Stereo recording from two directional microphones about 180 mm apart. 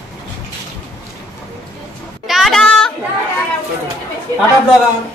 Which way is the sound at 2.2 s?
Centre (ahead or behind).